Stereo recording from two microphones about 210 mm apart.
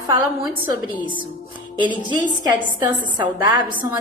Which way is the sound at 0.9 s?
25° left (ahead or behind).